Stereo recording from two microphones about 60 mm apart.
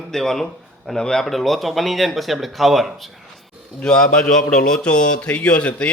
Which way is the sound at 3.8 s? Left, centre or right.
Centre.